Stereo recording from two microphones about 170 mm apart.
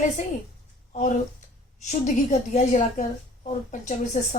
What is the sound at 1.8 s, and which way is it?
A woman's voice, 45° left (ahead or behind).